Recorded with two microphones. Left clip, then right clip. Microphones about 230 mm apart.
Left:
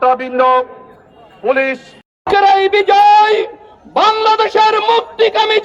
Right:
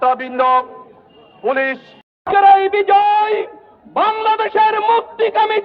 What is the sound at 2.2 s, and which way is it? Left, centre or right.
Music, left.